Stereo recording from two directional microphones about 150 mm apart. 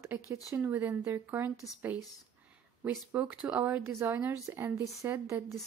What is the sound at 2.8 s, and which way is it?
Speech, 15° right (ahead or behind).